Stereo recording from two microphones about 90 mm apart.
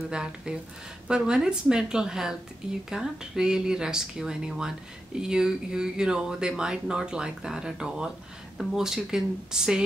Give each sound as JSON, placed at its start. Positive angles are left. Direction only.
{"t": 0.1, "sound": "speech", "side_deg": -10}